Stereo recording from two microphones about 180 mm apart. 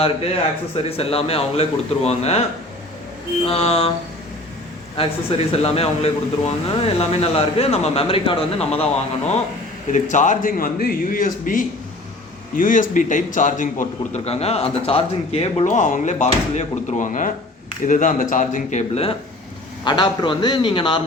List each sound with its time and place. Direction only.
0.9 s a man's voice: 30° left (ahead or behind)
3.4 s a man's voice: 35° left (ahead or behind)
4.9 s a man's voice: 35° left (ahead or behind)
19.8 s a man's voice: 25° left (ahead or behind)